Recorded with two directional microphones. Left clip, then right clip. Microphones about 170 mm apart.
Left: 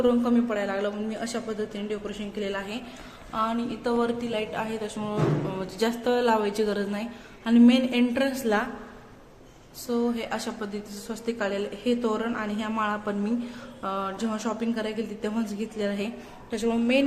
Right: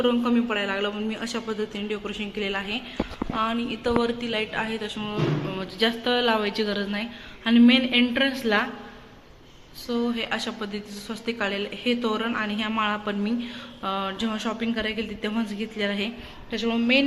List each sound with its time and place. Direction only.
0.0 s speech: 5° left (ahead or behind)
9.8 s speech: 10° left (ahead or behind)